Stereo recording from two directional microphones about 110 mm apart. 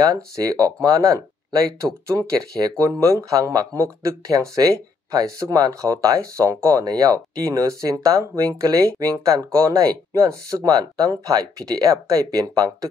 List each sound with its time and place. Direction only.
0.0 s speech: 35° right (ahead or behind)